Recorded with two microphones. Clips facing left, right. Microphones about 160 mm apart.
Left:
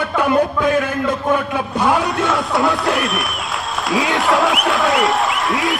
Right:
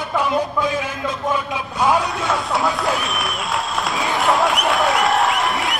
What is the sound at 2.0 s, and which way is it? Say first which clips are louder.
Speech: left 3 dB; centre (ahead or behind).